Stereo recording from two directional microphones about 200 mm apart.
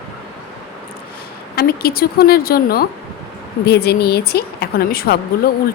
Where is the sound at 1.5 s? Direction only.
50° left (ahead or behind).